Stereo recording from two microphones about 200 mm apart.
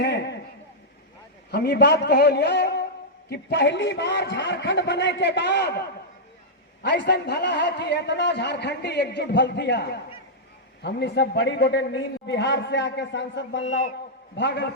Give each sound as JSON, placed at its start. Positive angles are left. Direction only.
{"t": 0.0, "sound": "a sound", "side_deg": 55}
{"t": 1.5, "sound": "a man's voice", "side_deg": 55}
{"t": 6.8, "sound": "a man's voice", "side_deg": 60}